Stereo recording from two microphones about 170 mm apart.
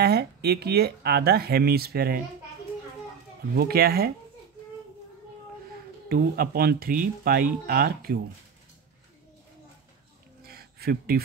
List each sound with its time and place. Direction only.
0.0 s speech: 70° right (ahead or behind)
3.5 s speech: 65° right (ahead or behind)
6.0 s speech: 60° right (ahead or behind)
10.4 s a sound: 65° right (ahead or behind)